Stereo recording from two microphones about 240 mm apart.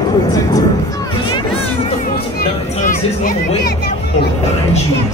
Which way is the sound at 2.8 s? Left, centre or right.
Left.